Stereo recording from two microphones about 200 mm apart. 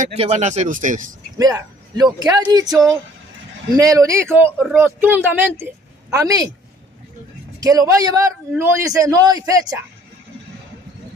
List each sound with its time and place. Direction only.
0.0 s speech: 35° right (ahead or behind)
1.4 s a man's voice: 20° right (ahead or behind)
7.6 s a man's voice: 15° right (ahead or behind)